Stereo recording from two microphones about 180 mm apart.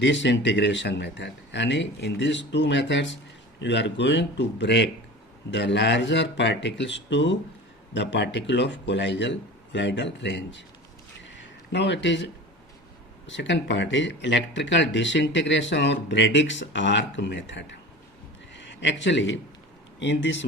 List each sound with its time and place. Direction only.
0.0 s speech: 90° left
11.7 s a man's voice: 80° left